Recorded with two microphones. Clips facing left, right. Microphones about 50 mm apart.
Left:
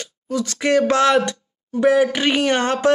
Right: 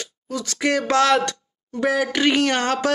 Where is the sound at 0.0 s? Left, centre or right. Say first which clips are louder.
Left 5 dB; left.